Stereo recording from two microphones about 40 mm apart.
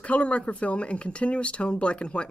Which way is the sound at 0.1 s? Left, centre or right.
Left.